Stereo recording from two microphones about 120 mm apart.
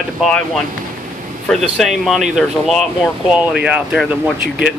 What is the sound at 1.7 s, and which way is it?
Speech, centre (ahead or behind).